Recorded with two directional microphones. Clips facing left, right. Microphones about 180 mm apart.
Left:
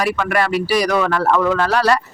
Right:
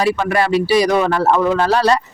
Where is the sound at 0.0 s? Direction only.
25° right (ahead or behind).